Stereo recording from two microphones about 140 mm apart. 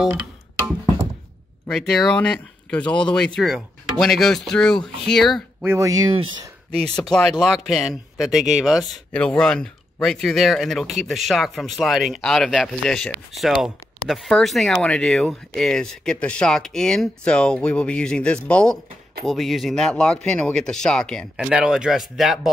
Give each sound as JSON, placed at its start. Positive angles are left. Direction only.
{"t": 1.7, "sound": "speech", "side_deg": 5}
{"t": 2.9, "sound": "speech", "side_deg": 35}
{"t": 3.3, "sound": "speech", "side_deg": -5}
{"t": 5.7, "sound": "speech", "side_deg": -25}
{"t": 6.1, "sound": "speech", "side_deg": -35}
{"t": 7.0, "sound": "speech", "side_deg": 5}